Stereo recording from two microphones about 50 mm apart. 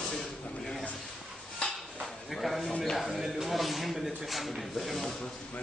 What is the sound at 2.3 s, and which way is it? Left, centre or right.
Speech, centre.